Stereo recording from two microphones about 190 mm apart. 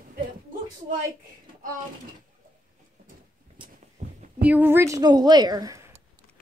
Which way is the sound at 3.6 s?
25° right (ahead or behind).